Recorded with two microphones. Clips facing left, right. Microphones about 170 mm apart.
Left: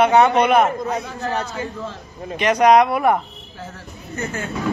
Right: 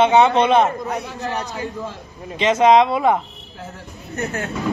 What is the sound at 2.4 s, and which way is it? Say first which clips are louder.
Speech: even; 20° right (ahead or behind).